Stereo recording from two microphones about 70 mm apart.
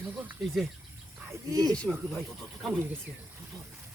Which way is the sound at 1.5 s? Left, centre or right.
Right.